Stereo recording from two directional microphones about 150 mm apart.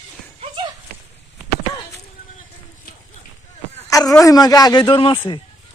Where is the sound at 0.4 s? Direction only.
30° right (ahead or behind).